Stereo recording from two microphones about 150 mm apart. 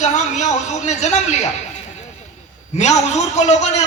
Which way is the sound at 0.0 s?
50° left (ahead or behind).